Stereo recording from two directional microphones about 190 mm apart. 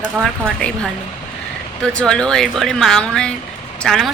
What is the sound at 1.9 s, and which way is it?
A woman's voice, 5° left (ahead or behind).